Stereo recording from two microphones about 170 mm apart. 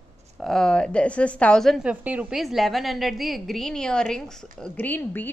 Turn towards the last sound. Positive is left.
turn(degrees=10)  # may be behind; listen again after turning